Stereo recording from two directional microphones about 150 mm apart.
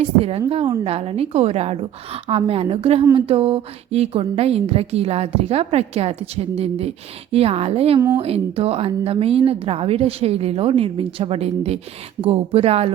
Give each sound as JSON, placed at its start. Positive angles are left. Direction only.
{"t": 0.0, "sound": "a woman's voice", "side_deg": -40}